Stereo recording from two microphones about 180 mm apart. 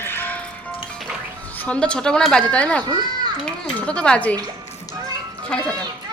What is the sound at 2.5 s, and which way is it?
A woman's voice, 5° left (ahead or behind).